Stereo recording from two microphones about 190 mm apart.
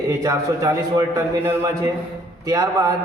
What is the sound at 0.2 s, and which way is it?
A man's voice, 15° right (ahead or behind).